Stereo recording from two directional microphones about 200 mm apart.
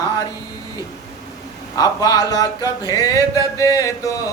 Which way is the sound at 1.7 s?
20° left (ahead or behind).